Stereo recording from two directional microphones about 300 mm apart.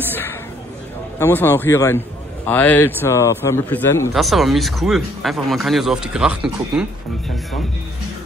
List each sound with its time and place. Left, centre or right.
1.2 s a man's voice: centre